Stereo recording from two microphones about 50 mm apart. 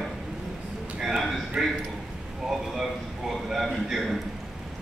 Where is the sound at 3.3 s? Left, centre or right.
Centre.